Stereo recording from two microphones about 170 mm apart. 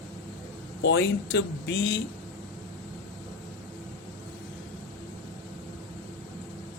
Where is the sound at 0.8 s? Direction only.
90° left.